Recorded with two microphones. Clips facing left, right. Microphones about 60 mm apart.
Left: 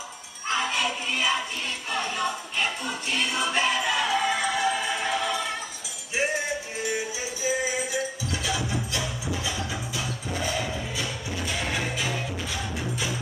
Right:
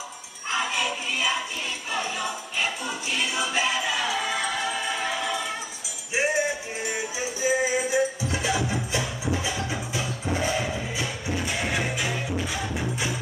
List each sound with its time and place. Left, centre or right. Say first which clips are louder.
0.5 s music: even; centre
6.1 s music: right 3 dB; centre
7.4 s music: right 4 dB; right